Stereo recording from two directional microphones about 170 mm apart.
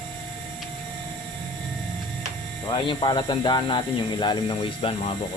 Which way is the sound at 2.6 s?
25° left (ahead or behind).